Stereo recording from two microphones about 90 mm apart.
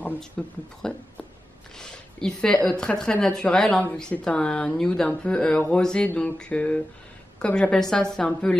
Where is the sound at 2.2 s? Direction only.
10° left (ahead or behind).